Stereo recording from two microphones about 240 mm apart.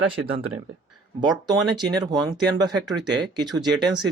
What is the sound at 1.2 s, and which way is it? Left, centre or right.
Speech, centre.